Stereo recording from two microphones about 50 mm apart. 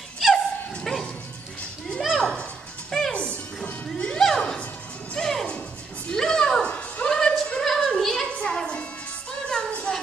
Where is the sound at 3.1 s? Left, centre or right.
Left.